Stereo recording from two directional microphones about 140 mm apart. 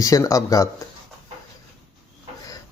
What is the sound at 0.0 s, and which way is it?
Speech, 25° left (ahead or behind).